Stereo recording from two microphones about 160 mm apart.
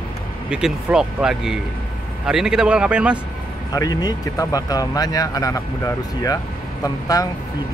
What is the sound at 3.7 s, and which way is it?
Speech, 25° left (ahead or behind).